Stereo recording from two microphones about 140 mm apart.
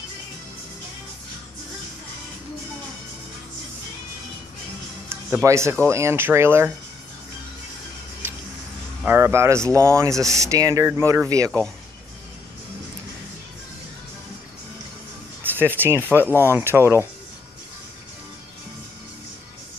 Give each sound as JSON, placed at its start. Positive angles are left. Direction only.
{"t": 5.4, "sound": "speech", "side_deg": -20}
{"t": 9.0, "sound": "speech", "side_deg": -15}
{"t": 15.4, "sound": "speech", "side_deg": -15}